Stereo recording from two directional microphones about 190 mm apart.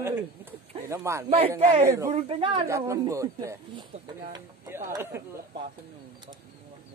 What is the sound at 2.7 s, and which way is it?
Speech, 15° right (ahead or behind).